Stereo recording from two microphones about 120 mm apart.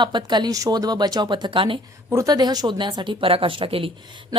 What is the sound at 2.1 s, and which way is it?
A woman's voice, 30° right (ahead or behind).